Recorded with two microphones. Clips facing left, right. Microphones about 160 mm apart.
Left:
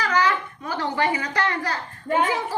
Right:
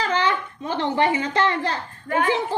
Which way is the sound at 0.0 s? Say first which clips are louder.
Even; 25° right (ahead or behind).